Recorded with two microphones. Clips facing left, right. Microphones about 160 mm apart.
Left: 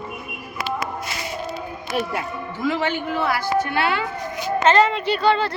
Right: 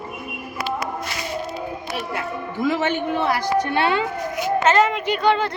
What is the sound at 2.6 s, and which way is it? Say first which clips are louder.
A man's voice: right 2 dB; 20° right (ahead or behind).